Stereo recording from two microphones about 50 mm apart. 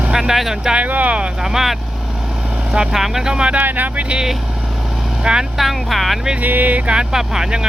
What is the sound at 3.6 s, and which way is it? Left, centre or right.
Speech, right.